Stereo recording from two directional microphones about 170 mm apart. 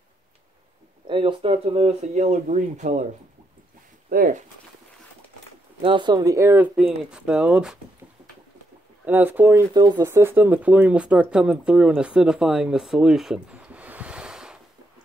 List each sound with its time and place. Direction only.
1.0 s speech: 30° right (ahead or behind)
4.1 s speech: 55° right (ahead or behind)
5.8 s speech: 30° right (ahead or behind); by 7.8 s 5° right (ahead or behind)
9.0 s speech: 10° right (ahead or behind)